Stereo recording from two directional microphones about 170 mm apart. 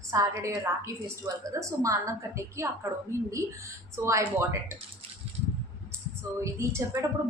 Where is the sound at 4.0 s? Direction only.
15° right (ahead or behind).